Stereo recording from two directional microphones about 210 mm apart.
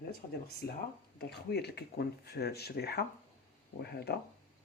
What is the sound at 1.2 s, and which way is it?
Speech, 50° left (ahead or behind).